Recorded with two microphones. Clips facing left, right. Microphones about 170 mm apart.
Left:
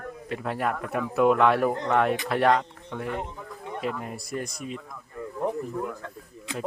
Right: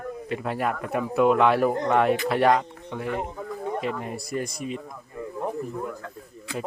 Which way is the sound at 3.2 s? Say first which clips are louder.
Right 6 dB; 45° right (ahead or behind).